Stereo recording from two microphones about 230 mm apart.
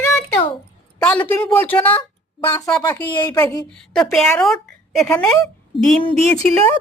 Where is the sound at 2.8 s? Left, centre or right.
Centre.